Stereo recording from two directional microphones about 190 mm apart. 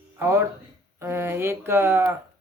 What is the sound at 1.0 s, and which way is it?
Speech, 15° right (ahead or behind).